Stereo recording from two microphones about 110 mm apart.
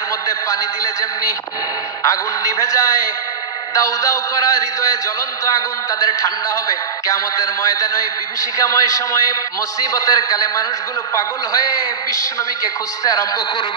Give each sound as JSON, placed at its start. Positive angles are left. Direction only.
{"t": 2.0, "sound": "a man's voice", "side_deg": 30}
{"t": 5.9, "sound": "a man's voice", "side_deg": 30}